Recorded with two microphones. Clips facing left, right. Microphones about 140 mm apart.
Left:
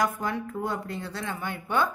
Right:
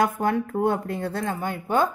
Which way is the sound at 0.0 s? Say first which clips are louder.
Right 5 dB; 60° right (ahead or behind).